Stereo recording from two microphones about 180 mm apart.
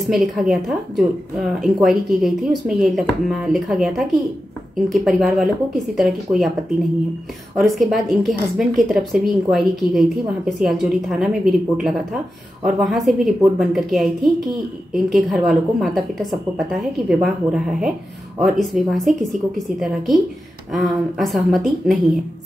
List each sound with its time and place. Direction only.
0.0 s a woman's voice: centre (ahead or behind)
7.5 s a woman's voice: centre (ahead or behind)